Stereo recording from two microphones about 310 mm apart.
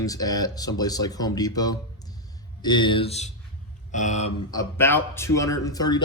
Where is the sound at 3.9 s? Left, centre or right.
Left.